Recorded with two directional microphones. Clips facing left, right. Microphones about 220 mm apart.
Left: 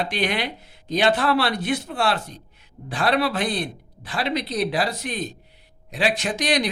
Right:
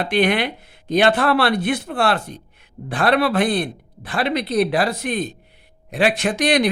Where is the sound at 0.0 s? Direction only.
60° right (ahead or behind).